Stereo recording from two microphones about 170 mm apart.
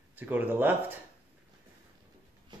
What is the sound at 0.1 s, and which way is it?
Speech, 10° right (ahead or behind).